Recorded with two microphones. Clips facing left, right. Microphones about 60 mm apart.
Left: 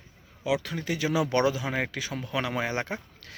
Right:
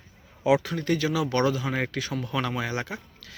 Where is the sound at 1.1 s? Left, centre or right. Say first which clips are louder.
Left 4 dB; left.